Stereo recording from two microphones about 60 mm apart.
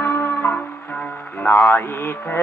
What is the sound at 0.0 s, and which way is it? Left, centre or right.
Music, left.